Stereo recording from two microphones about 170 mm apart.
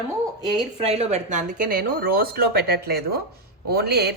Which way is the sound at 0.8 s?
35° right (ahead or behind).